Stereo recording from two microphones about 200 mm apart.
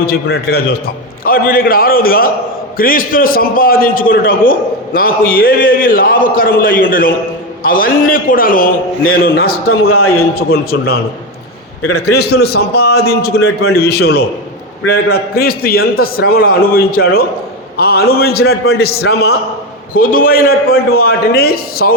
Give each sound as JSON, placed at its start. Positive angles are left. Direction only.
{"t": 0.0, "sound": "a man's voice", "side_deg": 50}
{"t": 9.8, "sound": "a man's voice", "side_deg": 90}
{"t": 10.2, "sound": "a man's voice", "side_deg": 50}